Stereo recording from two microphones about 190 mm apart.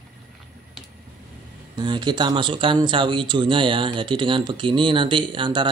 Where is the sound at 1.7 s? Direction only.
25° right (ahead or behind).